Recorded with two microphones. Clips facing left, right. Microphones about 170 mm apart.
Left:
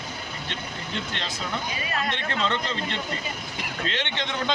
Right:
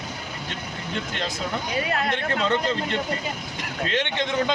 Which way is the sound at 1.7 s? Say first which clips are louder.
Right 5 dB; 65° right (ahead or behind).